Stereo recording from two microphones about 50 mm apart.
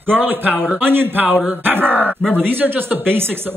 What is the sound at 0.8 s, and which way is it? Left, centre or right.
Speech, right.